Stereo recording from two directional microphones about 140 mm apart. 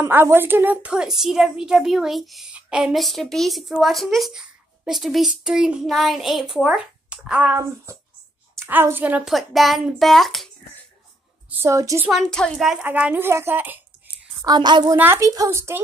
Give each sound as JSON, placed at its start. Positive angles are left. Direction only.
{"t": 0.0, "sound": "a woman's voice", "side_deg": -15}
{"t": 9.3, "sound": "a woman's voice", "side_deg": 0}
{"t": 11.5, "sound": "a woman's voice", "side_deg": -20}
{"t": 12.1, "sound": "a woman's voice", "side_deg": 5}
{"t": 12.8, "sound": "speech", "side_deg": -10}
{"t": 14.4, "sound": "a woman's voice", "side_deg": -30}
{"t": 15.0, "sound": "a woman's voice", "side_deg": -20}